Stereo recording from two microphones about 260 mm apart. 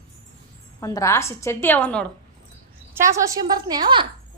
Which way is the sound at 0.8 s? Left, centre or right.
Centre.